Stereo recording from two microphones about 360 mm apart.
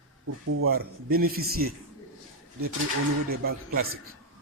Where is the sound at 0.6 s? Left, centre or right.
Right.